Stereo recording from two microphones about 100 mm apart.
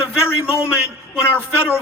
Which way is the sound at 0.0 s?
25° left (ahead or behind).